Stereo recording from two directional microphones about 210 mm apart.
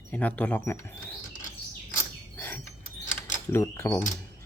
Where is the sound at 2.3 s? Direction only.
10° left (ahead or behind).